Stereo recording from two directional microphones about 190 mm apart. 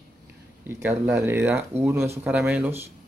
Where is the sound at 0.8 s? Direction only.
10° right (ahead or behind).